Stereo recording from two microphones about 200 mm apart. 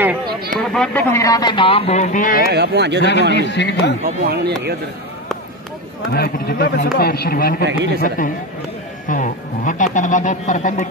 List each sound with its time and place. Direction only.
0.6 s speech: 5° left (ahead or behind); by 2.4 s 40° left (ahead or behind)
2.5 s speech: 55° right (ahead or behind)
3.0 s a man's voice: 60° left (ahead or behind)
4.3 s speech: 55° right (ahead or behind)
6.1 s a man's voice: 50° left (ahead or behind)
7.6 s speech: 60° right (ahead or behind)
9.0 s speech: 40° left (ahead or behind)